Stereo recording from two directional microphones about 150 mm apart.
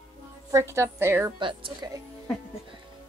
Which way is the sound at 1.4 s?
35° right (ahead or behind).